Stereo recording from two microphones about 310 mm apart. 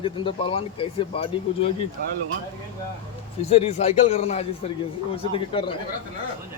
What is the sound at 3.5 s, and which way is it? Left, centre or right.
A man's voice, centre.